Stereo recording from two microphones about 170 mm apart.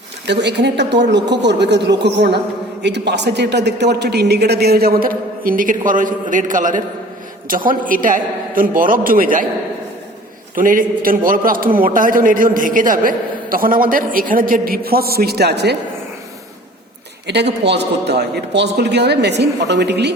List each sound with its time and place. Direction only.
0.3 s a man's voice: 85° right; by 9.5 s 55° right (ahead or behind)
10.5 s a man's voice: 55° right (ahead or behind); by 15.7 s 75° right (ahead or behind)
17.2 s a man's voice: 80° right